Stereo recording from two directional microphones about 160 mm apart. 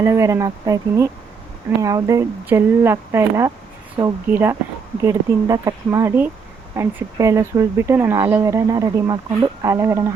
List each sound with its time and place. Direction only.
0.0 s speech: 20° right (ahead or behind)